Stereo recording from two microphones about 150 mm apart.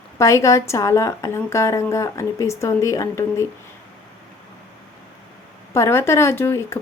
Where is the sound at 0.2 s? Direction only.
20° left (ahead or behind).